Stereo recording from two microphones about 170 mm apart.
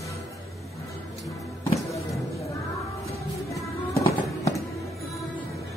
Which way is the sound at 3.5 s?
20° left (ahead or behind).